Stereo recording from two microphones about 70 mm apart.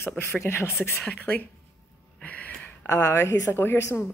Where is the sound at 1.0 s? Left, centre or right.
Left.